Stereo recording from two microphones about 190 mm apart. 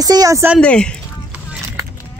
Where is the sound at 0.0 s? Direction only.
20° right (ahead or behind).